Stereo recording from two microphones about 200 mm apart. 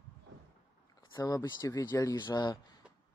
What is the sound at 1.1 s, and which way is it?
Speech, 15° left (ahead or behind).